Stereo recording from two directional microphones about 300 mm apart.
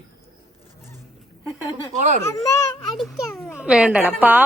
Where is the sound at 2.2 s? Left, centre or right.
Centre.